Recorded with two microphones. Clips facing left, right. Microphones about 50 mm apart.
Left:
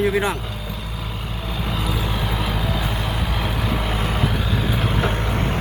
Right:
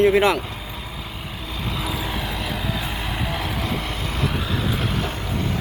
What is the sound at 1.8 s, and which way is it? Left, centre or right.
Vehicle, centre.